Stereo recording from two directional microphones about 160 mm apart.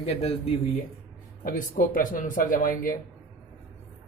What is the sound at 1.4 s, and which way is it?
Speech, 65° left (ahead or behind).